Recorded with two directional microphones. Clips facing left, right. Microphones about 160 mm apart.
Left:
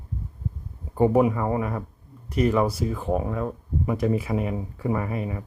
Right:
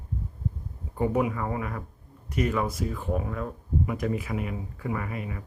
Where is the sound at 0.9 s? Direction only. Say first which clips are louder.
Left 6 dB; 35° left (ahead or behind).